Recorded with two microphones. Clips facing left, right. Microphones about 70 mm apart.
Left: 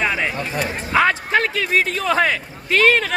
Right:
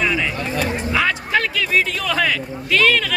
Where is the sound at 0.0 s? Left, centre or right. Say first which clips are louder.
Even; left.